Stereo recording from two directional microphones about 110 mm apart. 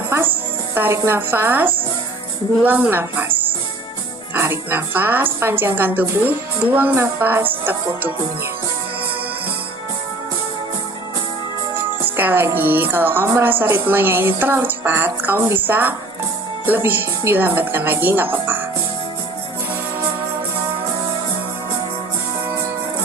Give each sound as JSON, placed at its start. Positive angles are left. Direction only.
{"t": 0.1, "sound": "music", "side_deg": -20}
{"t": 2.6, "sound": "a woman's voice", "side_deg": -15}
{"t": 4.4, "sound": "a woman's voice", "side_deg": -20}
{"t": 12.1, "sound": "a woman's voice", "side_deg": -20}